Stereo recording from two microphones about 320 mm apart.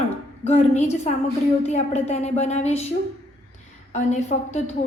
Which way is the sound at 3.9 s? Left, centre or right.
Left.